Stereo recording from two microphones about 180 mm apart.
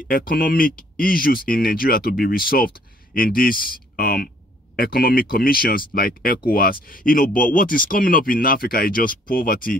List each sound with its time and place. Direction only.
0.1 s speech: 55° left (ahead or behind)